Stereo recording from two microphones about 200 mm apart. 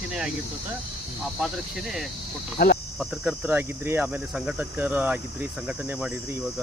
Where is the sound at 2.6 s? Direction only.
50° left (ahead or behind).